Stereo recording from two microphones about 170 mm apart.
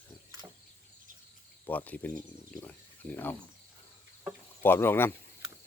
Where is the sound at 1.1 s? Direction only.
55° right (ahead or behind).